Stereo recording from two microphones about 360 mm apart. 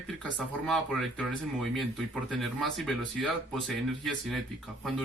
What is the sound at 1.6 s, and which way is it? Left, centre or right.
Speech, centre.